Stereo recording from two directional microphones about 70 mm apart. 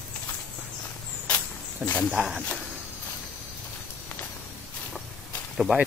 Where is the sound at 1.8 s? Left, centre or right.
Centre.